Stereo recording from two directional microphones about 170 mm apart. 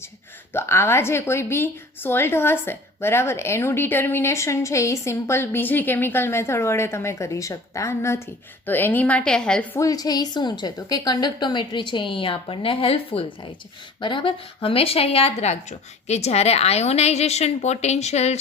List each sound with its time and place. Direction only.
0.5 s a woman's voice: 15° left (ahead or behind)
9.7 s a woman's voice: 20° left (ahead or behind); by 18.3 s 40° left (ahead or behind)